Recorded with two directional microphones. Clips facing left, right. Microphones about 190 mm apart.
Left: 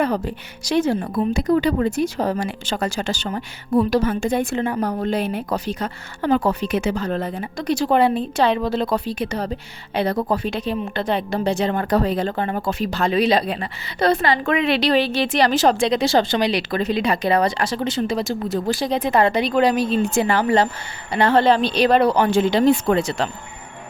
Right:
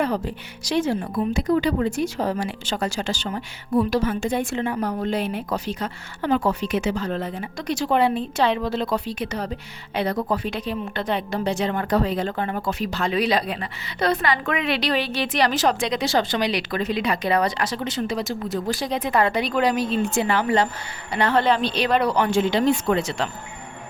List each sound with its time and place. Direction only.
0.7 s a woman's voice: 45° left (ahead or behind)